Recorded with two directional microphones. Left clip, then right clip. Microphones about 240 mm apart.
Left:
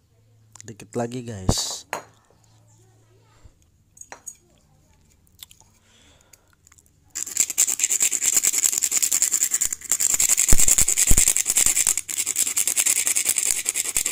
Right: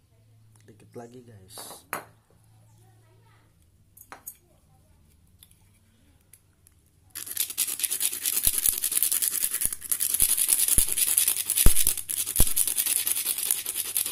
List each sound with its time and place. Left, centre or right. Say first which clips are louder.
0.5 s speech: left 14 dB; left
5.4 s chewing: left 15 dB; left
7.1 s toothbrush: left 9 dB; centre